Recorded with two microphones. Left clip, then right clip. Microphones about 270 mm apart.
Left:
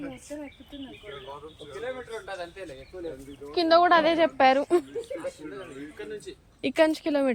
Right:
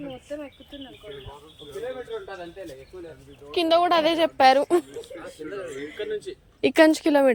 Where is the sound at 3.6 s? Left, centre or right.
Right.